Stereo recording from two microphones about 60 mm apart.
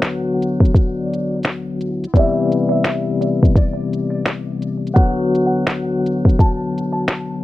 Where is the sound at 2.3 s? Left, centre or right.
Centre.